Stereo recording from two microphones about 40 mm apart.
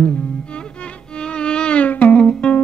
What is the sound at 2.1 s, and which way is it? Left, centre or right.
Music, left.